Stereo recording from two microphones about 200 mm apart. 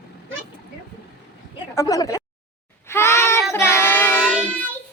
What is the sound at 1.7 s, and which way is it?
Speech, 15° left (ahead or behind).